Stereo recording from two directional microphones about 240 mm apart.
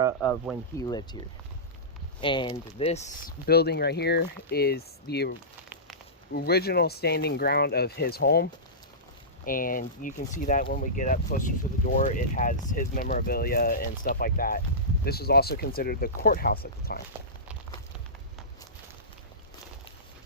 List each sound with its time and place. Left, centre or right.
0.8 s speech: centre
2.2 s speech: centre
3.4 s speech: left